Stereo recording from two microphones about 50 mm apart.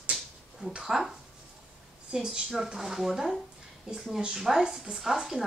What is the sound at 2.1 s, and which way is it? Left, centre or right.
Speech, centre.